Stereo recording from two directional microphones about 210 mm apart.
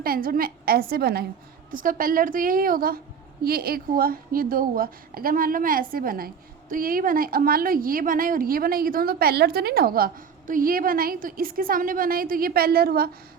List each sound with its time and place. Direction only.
0.0 s a woman's voice: 45° right (ahead or behind)